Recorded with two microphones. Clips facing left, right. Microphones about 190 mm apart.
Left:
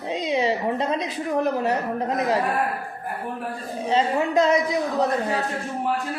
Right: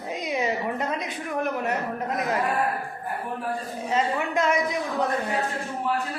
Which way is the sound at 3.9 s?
30° left (ahead or behind).